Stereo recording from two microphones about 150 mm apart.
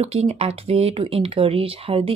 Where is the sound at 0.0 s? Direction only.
40° right (ahead or behind).